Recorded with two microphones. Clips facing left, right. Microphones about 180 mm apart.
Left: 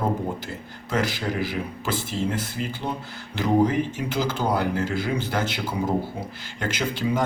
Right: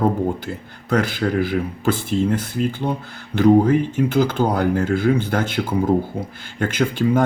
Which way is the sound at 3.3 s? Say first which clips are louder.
Right 7 dB; 55° right (ahead or behind).